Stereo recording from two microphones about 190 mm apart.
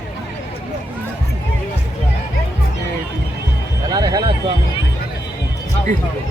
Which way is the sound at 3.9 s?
20° right (ahead or behind).